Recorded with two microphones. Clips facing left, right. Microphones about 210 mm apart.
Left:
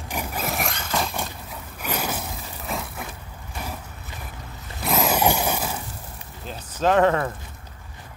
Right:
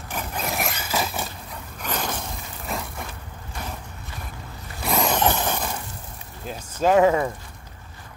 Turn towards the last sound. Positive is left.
turn(degrees=-10)  # may be behind; listen again after turning